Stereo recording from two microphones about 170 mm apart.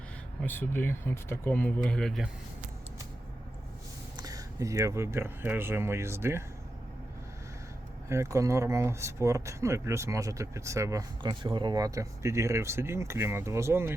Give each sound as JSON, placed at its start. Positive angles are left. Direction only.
{"t": 0.4, "sound": "speech", "side_deg": 10}
{"t": 4.2, "sound": "speech", "side_deg": -20}
{"t": 8.1, "sound": "speech", "side_deg": -15}